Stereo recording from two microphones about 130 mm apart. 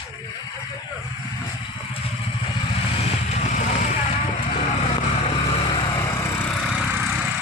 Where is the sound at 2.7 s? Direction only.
55° left (ahead or behind).